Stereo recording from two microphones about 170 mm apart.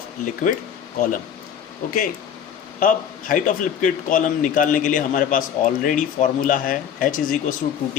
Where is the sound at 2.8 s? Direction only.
55° left (ahead or behind).